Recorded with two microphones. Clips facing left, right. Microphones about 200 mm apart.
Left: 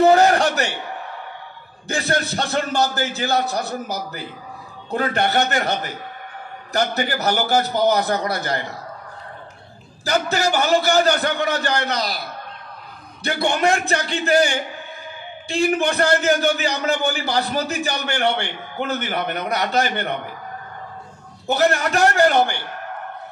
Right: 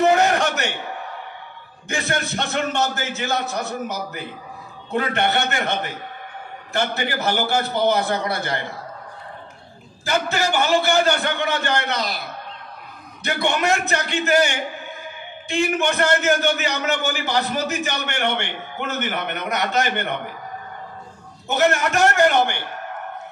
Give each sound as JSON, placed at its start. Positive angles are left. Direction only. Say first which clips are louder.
{"t": 0.1, "sound": "a sound", "louder": "left 3 dB", "side_deg": 35}
{"t": 1.9, "sound": "a man's voice", "louder": "left 2 dB", "side_deg": 35}
{"t": 10.0, "sound": "a man's voice", "louder": "left 2 dB", "side_deg": 40}
{"t": 13.2, "sound": "a man's voice", "louder": "left 2 dB", "side_deg": 35}
{"t": 21.5, "sound": "a man's voice", "louder": "left 1 dB", "side_deg": 35}